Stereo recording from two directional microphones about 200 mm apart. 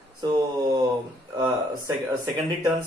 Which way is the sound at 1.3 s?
15° right (ahead or behind).